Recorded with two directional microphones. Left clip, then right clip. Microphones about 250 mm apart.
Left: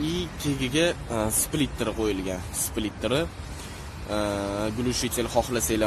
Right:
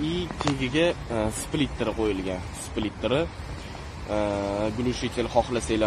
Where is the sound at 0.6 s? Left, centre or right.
Centre.